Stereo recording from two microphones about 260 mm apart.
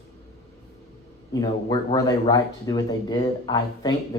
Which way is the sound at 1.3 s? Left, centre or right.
Centre.